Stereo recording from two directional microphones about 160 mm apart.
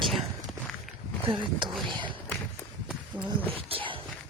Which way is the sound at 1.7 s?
Centre (ahead or behind).